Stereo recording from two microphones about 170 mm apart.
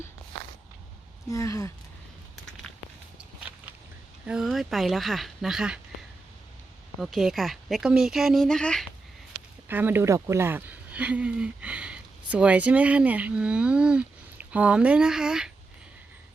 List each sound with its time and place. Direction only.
1.3 s speech: 20° left (ahead or behind)
4.3 s speech: centre (ahead or behind)
7.0 s speech: centre (ahead or behind)
9.6 s speech: 10° right (ahead or behind)